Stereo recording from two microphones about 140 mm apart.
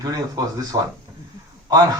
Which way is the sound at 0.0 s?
25° right (ahead or behind).